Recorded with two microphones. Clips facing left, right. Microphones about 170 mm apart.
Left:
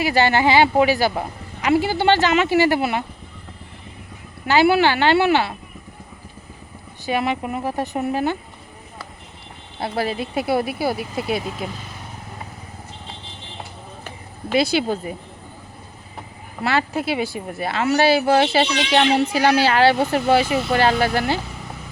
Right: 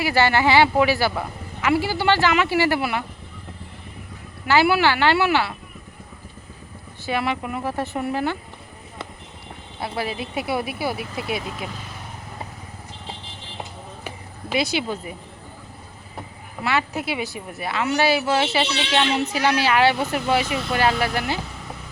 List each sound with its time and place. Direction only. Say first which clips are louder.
0.0 s a woman's voice: left 2 dB; 20° left (ahead or behind)
4.4 s a woman's voice: left 2 dB; 20° left (ahead or behind)
7.0 s a woman's voice: left 2 dB; 20° left (ahead or behind)
9.8 s a woman's voice: left 4 dB; 35° left (ahead or behind)
14.6 s a woman's voice: left 5 dB; 35° left (ahead or behind)
16.6 s a woman's voice: left 3 dB; 30° left (ahead or behind)